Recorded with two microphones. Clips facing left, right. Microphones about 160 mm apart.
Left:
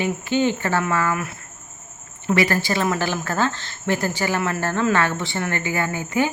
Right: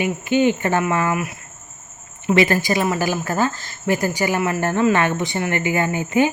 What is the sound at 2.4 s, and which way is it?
A woman's voice, 20° right (ahead or behind).